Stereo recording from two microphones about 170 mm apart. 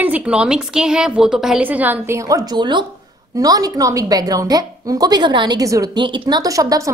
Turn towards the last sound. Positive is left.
turn(degrees=-20)  # may be behind; listen again after turning